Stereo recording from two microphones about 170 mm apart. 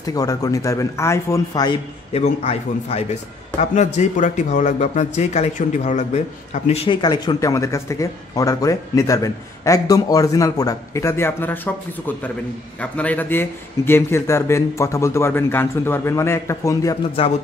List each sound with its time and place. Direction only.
0.0 s speech: 20° left (ahead or behind)
2.1 s a man's voice: 35° left (ahead or behind); by 11.7 s 10° left (ahead or behind)
12.8 s a man's voice: 5° left (ahead or behind)